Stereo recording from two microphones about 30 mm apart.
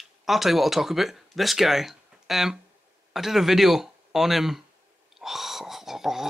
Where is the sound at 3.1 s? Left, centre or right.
Centre.